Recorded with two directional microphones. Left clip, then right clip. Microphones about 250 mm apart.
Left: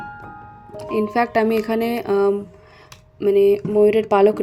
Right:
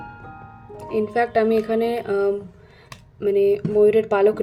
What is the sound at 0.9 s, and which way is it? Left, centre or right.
Speech, left.